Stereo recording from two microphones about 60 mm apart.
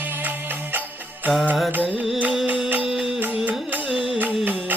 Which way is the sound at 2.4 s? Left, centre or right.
Right.